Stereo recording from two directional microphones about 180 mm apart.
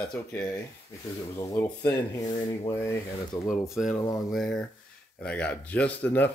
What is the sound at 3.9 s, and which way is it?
Speech, 15° left (ahead or behind).